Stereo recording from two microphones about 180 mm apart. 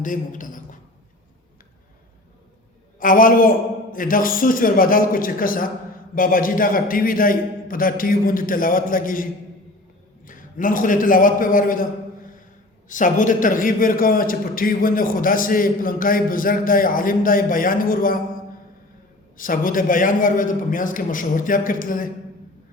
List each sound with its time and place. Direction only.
0.0 s a sound: 45° left (ahead or behind)
3.0 s a man's voice: 50° left (ahead or behind)
10.2 s a man's voice: 50° left (ahead or behind)
12.9 s a man's voice: 45° left (ahead or behind)
19.4 s a man's voice: 50° left (ahead or behind)